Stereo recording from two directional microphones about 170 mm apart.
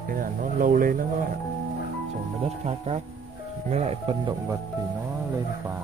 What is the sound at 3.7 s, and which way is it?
Speech, 35° right (ahead or behind).